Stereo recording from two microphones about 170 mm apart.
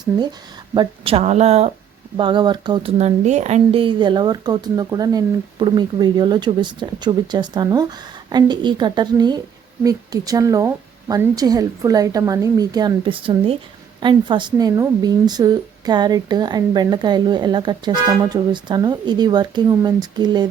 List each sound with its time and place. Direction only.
0.2 s speech: 25° right (ahead or behind)
2.1 s speech: 25° right (ahead or behind)
3.0 s speech: 45° right (ahead or behind); by 20.5 s 25° right (ahead or behind)